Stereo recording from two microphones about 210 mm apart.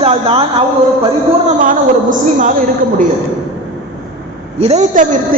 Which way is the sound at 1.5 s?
40° right (ahead or behind).